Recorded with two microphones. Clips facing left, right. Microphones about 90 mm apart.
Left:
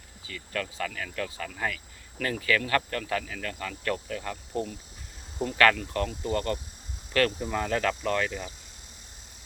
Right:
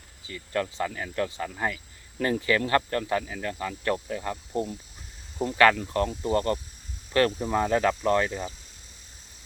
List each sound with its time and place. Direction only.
0.3 s speech: 25° right (ahead or behind)